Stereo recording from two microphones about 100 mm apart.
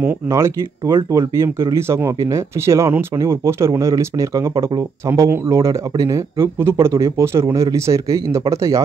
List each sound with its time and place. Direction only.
0.3 s speech: 30° right (ahead or behind)